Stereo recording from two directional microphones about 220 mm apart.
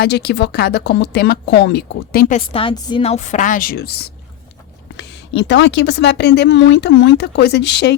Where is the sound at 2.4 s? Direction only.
25° left (ahead or behind).